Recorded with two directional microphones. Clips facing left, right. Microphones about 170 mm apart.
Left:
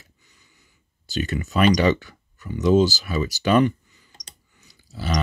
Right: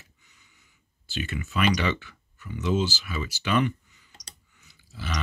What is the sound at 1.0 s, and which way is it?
Speech, 40° left (ahead or behind).